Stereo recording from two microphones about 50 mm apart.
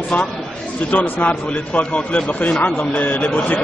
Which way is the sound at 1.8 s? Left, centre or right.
Left.